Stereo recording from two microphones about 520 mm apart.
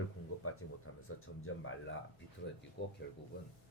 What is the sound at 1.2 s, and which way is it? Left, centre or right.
Speech, left.